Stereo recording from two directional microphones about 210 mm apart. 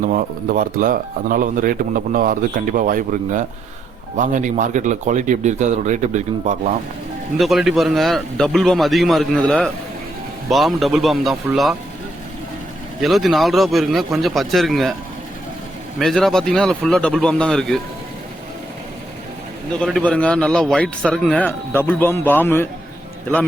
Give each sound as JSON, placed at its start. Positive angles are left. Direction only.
{"t": 0.0, "sound": "speech", "side_deg": -40}
{"t": 7.3, "sound": "a man's voice", "side_deg": 0}
{"t": 13.0, "sound": "a man's voice", "side_deg": 0}
{"t": 16.0, "sound": "a man's voice", "side_deg": 0}
{"t": 19.8, "sound": "a man's voice", "side_deg": 5}